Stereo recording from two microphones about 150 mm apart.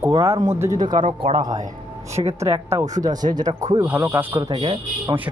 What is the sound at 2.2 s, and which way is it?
Speech, 35° right (ahead or behind).